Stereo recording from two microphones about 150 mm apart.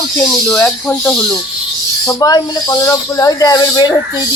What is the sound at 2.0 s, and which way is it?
Speech, 25° left (ahead or behind).